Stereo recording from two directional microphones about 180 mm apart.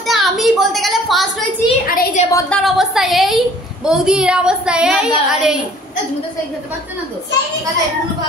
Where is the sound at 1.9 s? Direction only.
50° left (ahead or behind).